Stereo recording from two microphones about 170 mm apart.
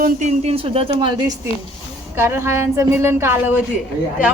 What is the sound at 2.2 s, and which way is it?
A woman's voice, 15° right (ahead or behind).